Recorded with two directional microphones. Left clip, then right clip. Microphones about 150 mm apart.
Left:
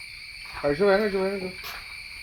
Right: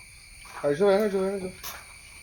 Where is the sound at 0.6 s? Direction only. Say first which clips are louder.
Left 1 dB; 35° left (ahead or behind).